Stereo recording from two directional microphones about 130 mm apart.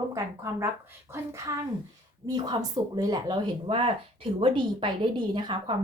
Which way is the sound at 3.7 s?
45° right (ahead or behind).